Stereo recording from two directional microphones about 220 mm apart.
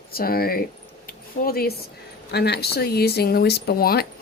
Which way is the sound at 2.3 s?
45° left (ahead or behind).